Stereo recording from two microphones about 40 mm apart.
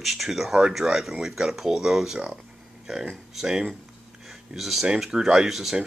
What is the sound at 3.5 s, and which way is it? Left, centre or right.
Speech, centre.